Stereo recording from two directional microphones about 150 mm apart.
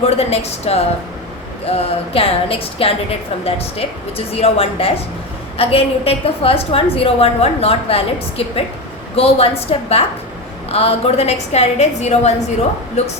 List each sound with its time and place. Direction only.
0.0 s a woman's voice: 45° left (ahead or behind)